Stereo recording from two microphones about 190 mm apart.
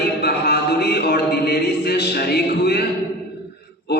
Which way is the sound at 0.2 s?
60° left (ahead or behind).